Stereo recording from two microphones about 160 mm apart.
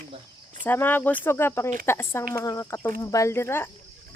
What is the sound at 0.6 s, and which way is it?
Speech, 10° left (ahead or behind).